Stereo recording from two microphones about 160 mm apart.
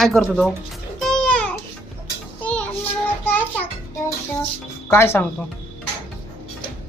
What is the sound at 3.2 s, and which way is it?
Music, 10° left (ahead or behind).